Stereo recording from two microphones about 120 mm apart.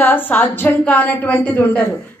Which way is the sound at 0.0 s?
15° left (ahead or behind).